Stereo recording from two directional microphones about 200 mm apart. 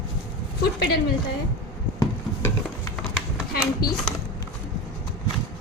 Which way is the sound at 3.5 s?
50° left (ahead or behind).